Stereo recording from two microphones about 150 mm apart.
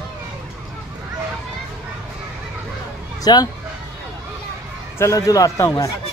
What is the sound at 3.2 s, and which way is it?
Speech, 25° left (ahead or behind).